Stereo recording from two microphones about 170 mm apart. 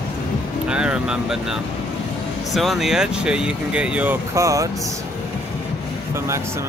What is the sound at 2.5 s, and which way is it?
Speech, centre (ahead or behind).